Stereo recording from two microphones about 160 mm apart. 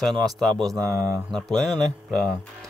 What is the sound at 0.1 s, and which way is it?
Speech, 25° right (ahead or behind).